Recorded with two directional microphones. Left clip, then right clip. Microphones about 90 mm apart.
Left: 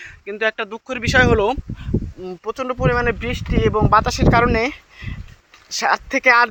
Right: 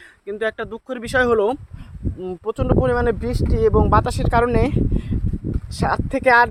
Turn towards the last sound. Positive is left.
turn(degrees=-35)  # may be behind; listen again after turning